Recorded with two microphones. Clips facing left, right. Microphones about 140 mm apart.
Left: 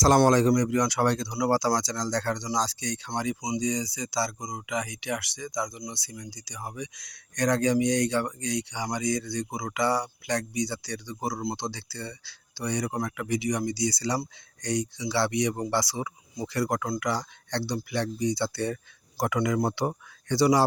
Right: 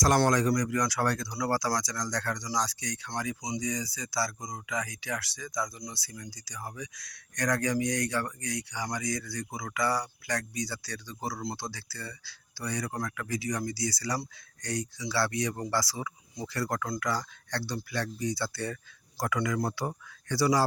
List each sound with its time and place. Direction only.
0.2 s speech: 25° left (ahead or behind)